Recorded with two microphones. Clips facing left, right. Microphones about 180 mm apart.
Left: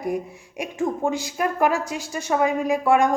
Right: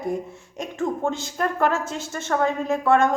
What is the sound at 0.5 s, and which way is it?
A woman's voice, 15° left (ahead or behind).